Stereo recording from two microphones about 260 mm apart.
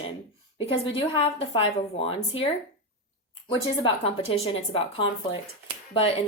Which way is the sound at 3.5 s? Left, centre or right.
Centre.